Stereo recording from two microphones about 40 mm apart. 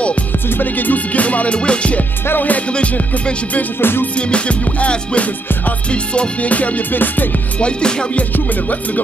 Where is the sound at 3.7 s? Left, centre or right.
Left.